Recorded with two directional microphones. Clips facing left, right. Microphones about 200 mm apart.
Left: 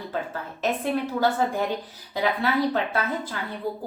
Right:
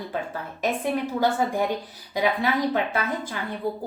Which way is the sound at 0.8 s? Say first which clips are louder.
Even; 15° right (ahead or behind).